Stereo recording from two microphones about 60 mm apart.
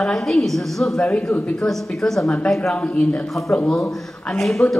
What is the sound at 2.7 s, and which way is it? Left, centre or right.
Speech, left.